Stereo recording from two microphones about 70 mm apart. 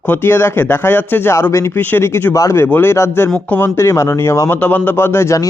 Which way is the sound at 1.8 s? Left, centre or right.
Left.